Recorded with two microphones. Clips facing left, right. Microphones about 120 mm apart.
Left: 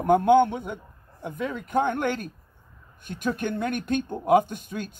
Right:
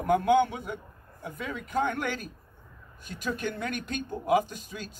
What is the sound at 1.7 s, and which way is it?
Speech, 55° left (ahead or behind).